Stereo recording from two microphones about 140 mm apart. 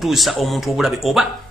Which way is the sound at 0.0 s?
Centre (ahead or behind).